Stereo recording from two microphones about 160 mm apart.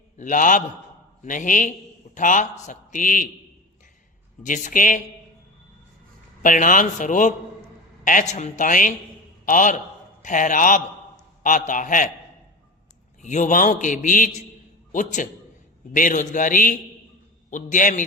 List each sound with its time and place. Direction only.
0.2 s a man's voice: 55° left (ahead or behind)
4.4 s a man's voice: 55° left (ahead or behind)
6.4 s a man's voice: 55° left (ahead or behind)
13.2 s a man's voice: 50° left (ahead or behind)